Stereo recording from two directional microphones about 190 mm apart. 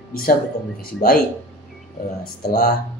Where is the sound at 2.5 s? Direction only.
55° left (ahead or behind).